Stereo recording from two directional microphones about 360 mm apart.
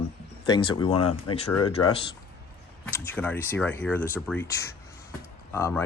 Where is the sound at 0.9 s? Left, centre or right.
Left.